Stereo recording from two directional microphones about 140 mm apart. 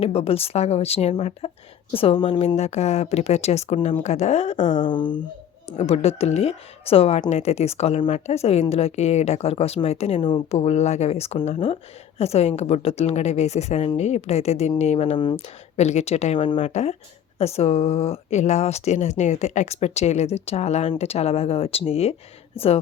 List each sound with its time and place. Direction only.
0.0 s speech: 45° left (ahead or behind)
2.6 s speech: 55° left (ahead or behind)
4.9 s speech: 35° left (ahead or behind)
5.7 s speech: 45° left (ahead or behind)
10.2 s speech: 35° left (ahead or behind)
10.6 s speech: 50° left (ahead or behind)